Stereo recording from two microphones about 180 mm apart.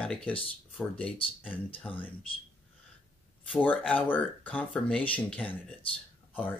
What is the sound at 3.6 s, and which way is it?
Speech, 10° left (ahead or behind).